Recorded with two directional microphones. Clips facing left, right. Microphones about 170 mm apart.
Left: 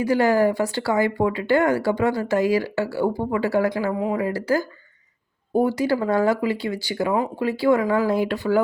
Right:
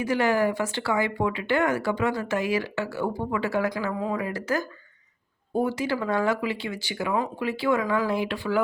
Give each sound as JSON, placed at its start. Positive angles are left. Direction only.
{"t": 0.0, "sound": "speech", "side_deg": 35}
{"t": 5.6, "sound": "speech", "side_deg": 40}